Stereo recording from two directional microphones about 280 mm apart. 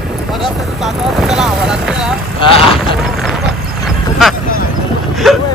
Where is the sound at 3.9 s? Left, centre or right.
Centre.